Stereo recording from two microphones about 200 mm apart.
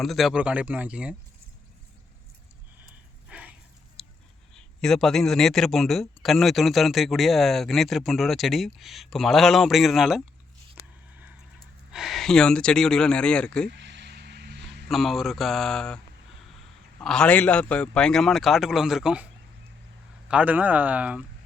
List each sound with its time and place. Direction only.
0.0 s a man's voice: centre (ahead or behind)
3.2 s a sound: 5° right (ahead or behind)
4.5 s a man's voice: centre (ahead or behind)
11.9 s a man's voice: centre (ahead or behind)
13.7 s vehicle: 60° right (ahead or behind)
14.8 s a man's voice: centre (ahead or behind)
17.0 s a man's voice: 5° left (ahead or behind)